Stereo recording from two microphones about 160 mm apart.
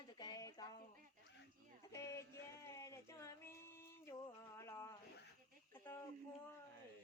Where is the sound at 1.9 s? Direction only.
20° left (ahead or behind).